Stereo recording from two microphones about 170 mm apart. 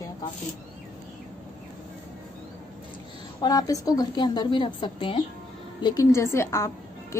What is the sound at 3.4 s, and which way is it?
A woman's voice, 20° left (ahead or behind).